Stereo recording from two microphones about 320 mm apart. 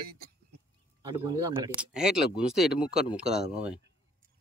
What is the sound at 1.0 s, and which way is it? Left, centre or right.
Speech, centre.